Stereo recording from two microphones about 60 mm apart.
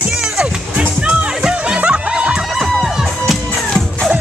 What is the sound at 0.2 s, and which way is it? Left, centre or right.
Music, centre.